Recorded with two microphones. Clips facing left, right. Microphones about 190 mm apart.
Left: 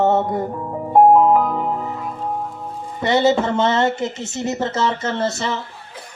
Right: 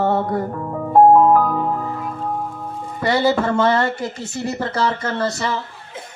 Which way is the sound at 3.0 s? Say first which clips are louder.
Left 1 dB; 25° left (ahead or behind).